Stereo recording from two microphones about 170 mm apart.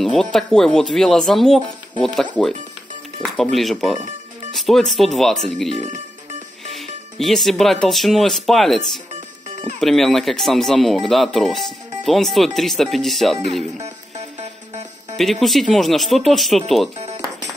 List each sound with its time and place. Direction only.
0.0 s speech: centre (ahead or behind)
3.2 s music: 5° left (ahead or behind)
3.5 s speech: centre (ahead or behind)
5.7 s speech: 40° right (ahead or behind)
6.7 s speech: centre (ahead or behind)
15.1 s speech: centre (ahead or behind)